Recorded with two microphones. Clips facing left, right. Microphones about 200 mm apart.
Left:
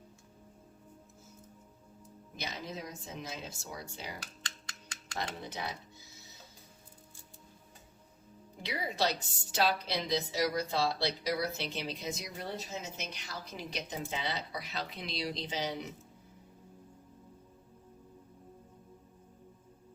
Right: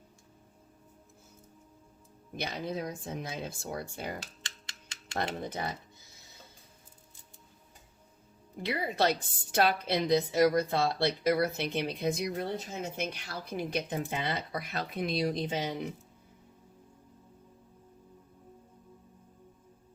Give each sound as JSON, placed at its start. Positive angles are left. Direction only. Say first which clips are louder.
{"t": 2.3, "sound": "a woman's voice", "louder": "right 6 dB", "side_deg": -55}
{"t": 8.6, "sound": "a woman's voice", "louder": "right 4 dB", "side_deg": -55}